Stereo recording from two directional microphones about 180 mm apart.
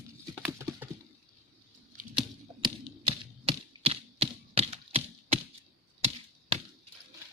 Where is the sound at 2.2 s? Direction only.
30° right (ahead or behind).